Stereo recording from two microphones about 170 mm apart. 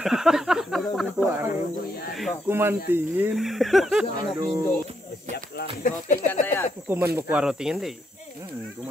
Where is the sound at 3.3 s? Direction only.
Centre (ahead or behind).